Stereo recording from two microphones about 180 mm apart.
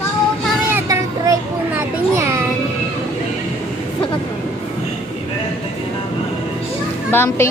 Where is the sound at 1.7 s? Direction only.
15° right (ahead or behind).